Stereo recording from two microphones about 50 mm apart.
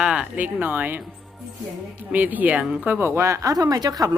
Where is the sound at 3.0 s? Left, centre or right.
Right.